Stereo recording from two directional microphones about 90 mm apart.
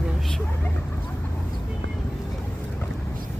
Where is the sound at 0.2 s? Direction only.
5° left (ahead or behind).